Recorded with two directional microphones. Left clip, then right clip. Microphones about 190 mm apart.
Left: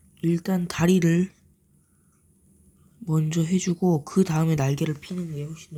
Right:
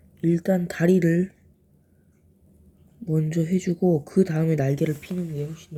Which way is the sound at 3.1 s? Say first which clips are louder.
Right 1 dB; 25° left (ahead or behind).